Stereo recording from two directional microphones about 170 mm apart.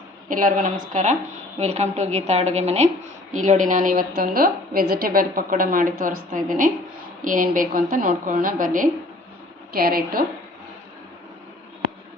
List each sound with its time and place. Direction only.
0.3 s a woman's voice: 50° right (ahead or behind)